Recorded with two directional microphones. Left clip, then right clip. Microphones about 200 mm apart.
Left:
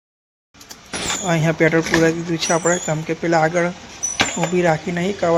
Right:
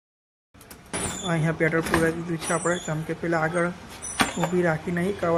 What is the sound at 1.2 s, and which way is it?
Speech, 20° left (ahead or behind).